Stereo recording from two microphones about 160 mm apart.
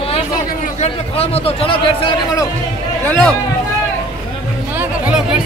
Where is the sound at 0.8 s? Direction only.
40° left (ahead or behind).